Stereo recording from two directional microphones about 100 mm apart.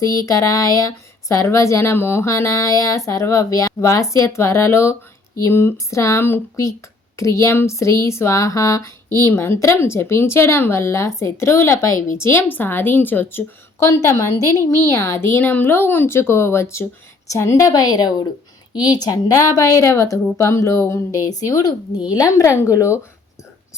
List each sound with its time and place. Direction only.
0.0 s speech: 35° left (ahead or behind)
17.7 s speech: 40° left (ahead or behind)